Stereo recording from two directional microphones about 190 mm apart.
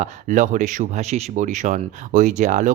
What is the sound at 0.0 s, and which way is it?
Speech, 40° right (ahead or behind).